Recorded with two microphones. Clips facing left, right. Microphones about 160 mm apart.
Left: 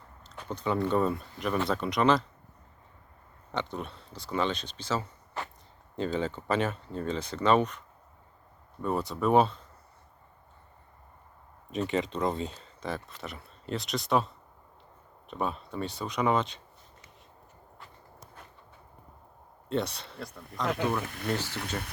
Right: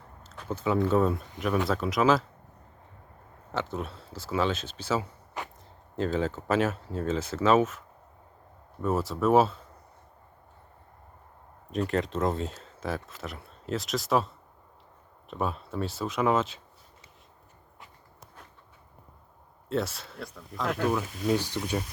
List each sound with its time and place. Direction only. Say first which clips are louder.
0.4 s speech: right 3 dB; 5° right (ahead or behind)
3.5 s speech: right 2 dB; 5° right (ahead or behind)
11.7 s speech: right 1 dB; centre (ahead or behind)
19.6 s speech: right 1 dB; 5° right (ahead or behind)
21.0 s speech: right 1 dB; 60° left (ahead or behind)
21.2 s speech: right 6 dB; 15° right (ahead or behind)